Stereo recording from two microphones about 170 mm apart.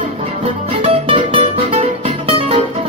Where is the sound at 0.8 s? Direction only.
30° right (ahead or behind).